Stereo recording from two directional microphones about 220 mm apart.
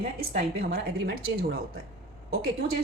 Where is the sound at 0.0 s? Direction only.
45° right (ahead or behind).